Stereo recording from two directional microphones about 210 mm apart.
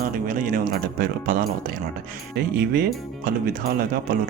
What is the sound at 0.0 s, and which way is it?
Speech, 40° right (ahead or behind).